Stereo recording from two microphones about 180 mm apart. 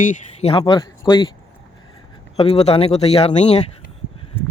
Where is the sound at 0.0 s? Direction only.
40° left (ahead or behind).